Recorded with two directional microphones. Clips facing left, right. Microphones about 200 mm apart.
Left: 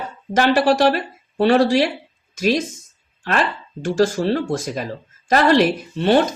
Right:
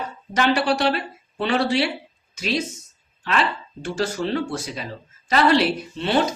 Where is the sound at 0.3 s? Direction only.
45° left (ahead or behind).